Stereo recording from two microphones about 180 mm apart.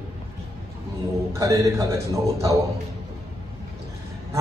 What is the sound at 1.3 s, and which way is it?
Speech, 20° right (ahead or behind).